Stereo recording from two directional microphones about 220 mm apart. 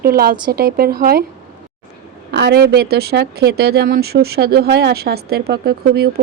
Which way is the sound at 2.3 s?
50° right (ahead or behind).